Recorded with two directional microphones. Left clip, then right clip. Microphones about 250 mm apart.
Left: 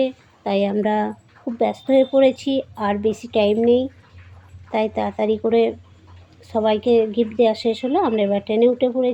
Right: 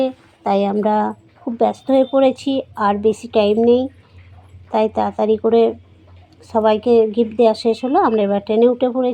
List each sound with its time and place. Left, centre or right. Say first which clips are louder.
0.0 s a woman's voice: right 2 dB; centre